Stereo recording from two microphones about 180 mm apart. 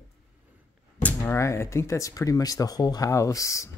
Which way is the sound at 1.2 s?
15° left (ahead or behind).